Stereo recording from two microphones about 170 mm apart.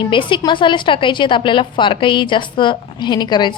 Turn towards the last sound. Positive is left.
turn(degrees=25)  # may be behind; listen again after turning